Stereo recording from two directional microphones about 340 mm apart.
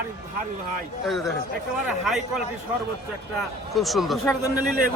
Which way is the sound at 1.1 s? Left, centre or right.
Centre.